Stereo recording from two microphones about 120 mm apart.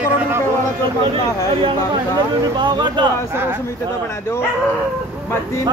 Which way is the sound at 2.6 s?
40° right (ahead or behind).